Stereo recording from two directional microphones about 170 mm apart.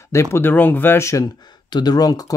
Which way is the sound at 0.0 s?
15° left (ahead or behind).